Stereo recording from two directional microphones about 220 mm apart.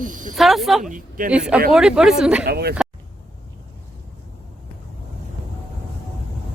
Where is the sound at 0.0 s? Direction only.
35° right (ahead or behind).